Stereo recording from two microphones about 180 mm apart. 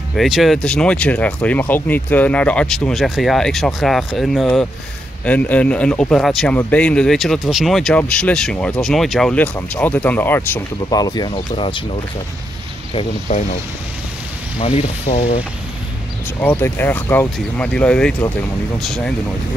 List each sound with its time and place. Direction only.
0.1 s speech: centre (ahead or behind); by 11.8 s 30° left (ahead or behind)
12.9 s speech: 40° left (ahead or behind)
14.8 s speech: 35° left (ahead or behind)
16.3 s speech: 10° left (ahead or behind)